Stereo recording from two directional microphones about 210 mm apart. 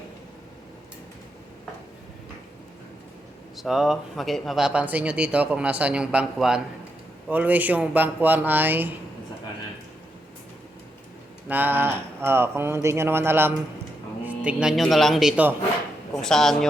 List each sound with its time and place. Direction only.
3.6 s speech: centre (ahead or behind)
11.4 s speech: 10° right (ahead or behind)